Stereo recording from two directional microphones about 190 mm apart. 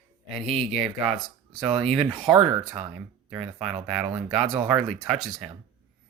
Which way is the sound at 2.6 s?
5° right (ahead or behind).